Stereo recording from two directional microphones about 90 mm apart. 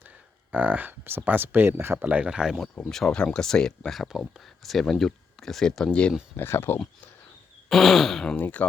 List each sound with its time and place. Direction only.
0.5 s speech: 20° right (ahead or behind)
2.0 s speech: 15° right (ahead or behind)
2.7 s speech: 5° left (ahead or behind)
6.3 s speech: 25° left (ahead or behind)
7.7 s speech: centre (ahead or behind)
8.4 s speech: 20° left (ahead or behind)